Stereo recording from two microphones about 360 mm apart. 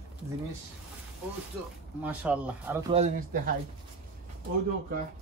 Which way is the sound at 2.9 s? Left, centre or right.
Right.